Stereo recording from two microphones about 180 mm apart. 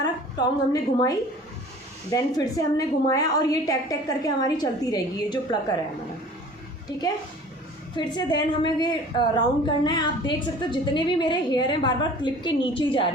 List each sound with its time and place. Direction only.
0.0 s a woman's voice: 20° left (ahead or behind)
7.9 s a woman's voice: 25° left (ahead or behind)